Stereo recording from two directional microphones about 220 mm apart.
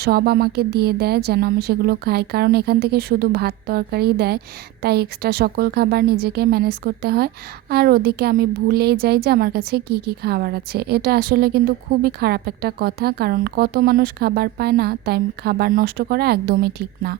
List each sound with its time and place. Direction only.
0.0 s a woman's voice: 45° right (ahead or behind)